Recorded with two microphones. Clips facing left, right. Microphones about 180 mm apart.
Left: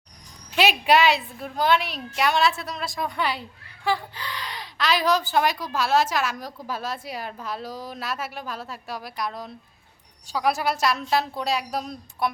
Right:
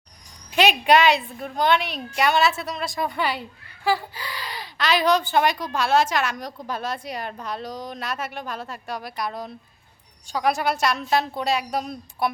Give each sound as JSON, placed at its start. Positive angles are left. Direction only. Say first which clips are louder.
{"t": 0.5, "sound": "speech", "louder": "right 2 dB", "side_deg": 5}